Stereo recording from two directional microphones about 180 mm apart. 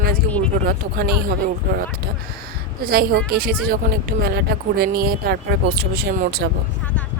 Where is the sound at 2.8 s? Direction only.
60° right (ahead or behind).